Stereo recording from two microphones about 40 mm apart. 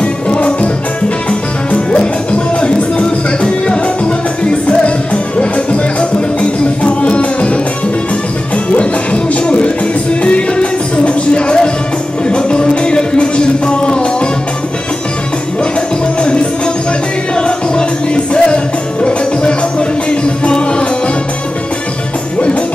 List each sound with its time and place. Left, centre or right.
0.0 s music: left
3.6 s music: left
8.7 s music: left
16.2 s music: left
20.1 s music: left